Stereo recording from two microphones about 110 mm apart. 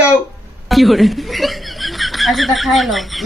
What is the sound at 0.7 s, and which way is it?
Speech, centre (ahead or behind).